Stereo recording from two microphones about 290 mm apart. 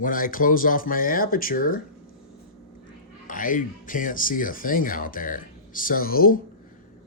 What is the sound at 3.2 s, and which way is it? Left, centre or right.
Speech, left.